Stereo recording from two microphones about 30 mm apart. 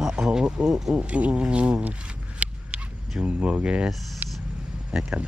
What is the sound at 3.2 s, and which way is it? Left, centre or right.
Speech, right.